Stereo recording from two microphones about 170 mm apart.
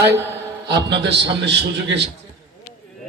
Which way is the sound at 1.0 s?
90° right.